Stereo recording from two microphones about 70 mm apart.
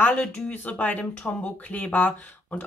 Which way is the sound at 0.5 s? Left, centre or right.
Left.